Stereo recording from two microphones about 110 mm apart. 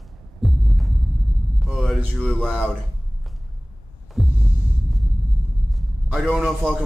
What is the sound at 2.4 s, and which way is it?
Speech, 10° right (ahead or behind).